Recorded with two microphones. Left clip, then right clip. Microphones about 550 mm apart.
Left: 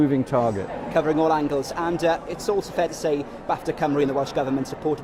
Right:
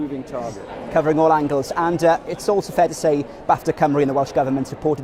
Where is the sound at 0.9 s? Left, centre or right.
Right.